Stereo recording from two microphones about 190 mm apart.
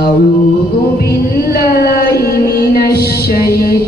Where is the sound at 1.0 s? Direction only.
55° left (ahead or behind).